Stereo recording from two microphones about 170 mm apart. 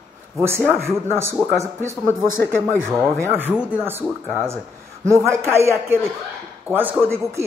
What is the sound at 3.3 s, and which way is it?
Speech, 10° right (ahead or behind).